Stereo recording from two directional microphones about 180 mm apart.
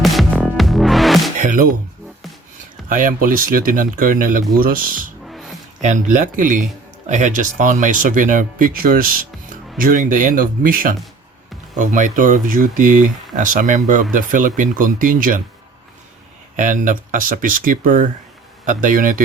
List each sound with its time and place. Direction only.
0.0 s music: centre (ahead or behind)
1.4 s music: 45° right (ahead or behind)
2.9 s speech: 50° right (ahead or behind)
5.2 s music: centre (ahead or behind)
5.8 s speech: 45° right (ahead or behind)
16.6 s speech: 45° right (ahead or behind)